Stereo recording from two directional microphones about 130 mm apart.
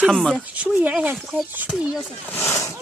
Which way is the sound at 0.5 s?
10° right (ahead or behind).